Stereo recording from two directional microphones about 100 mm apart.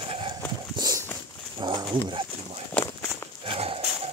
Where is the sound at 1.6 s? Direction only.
50° right (ahead or behind).